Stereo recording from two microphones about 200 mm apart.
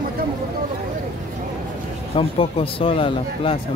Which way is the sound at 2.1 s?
25° left (ahead or behind).